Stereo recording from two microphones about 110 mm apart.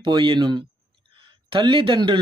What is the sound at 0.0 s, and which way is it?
A man's voice, 50° right (ahead or behind).